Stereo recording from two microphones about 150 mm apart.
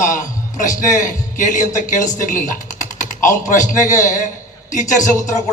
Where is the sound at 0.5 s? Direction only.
60° left (ahead or behind).